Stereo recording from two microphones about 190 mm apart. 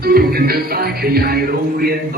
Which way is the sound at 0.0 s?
55° right (ahead or behind).